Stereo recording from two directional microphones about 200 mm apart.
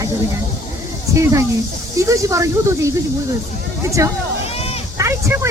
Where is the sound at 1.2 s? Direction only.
15° right (ahead or behind).